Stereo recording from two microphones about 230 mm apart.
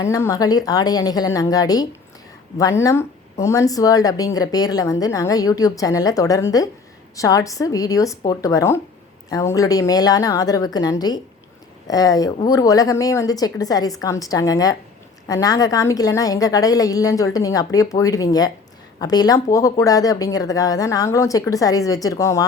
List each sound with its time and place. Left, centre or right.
0.0 s speech: centre